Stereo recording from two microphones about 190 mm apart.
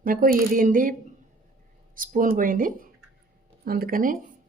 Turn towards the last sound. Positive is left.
turn(degrees=-50)  # may be behind; listen again after turning